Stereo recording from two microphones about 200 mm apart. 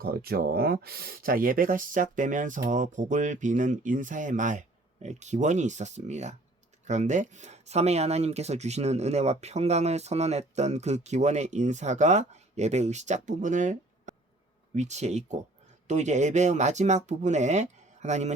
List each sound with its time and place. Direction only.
0.0 s speech: 50° right (ahead or behind)